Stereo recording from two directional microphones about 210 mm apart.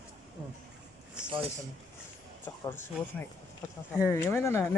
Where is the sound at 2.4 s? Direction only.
10° left (ahead or behind).